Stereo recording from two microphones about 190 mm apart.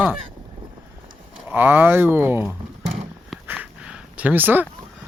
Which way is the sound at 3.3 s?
5° right (ahead or behind).